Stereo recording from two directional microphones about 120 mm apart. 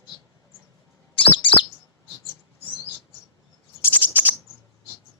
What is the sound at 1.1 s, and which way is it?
Bird, 45° left (ahead or behind).